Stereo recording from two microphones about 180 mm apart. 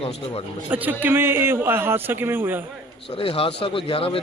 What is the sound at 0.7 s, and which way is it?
A man's voice, 10° right (ahead or behind).